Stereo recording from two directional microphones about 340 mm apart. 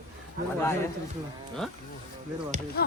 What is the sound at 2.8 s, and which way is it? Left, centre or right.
Music, left.